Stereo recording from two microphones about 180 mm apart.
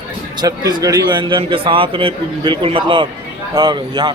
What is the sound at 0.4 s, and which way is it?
A man's voice, 20° right (ahead or behind).